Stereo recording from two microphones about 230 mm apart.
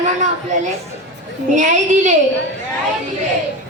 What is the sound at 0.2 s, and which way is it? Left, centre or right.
A woman's voice, right.